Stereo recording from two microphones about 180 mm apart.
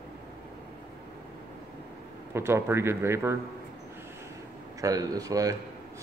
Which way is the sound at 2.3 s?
15° right (ahead or behind).